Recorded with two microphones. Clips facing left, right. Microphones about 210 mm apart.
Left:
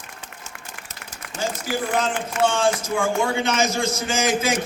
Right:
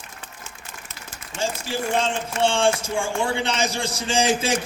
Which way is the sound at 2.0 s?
30° right (ahead or behind).